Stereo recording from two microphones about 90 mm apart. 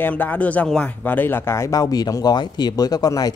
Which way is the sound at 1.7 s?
45° left (ahead or behind).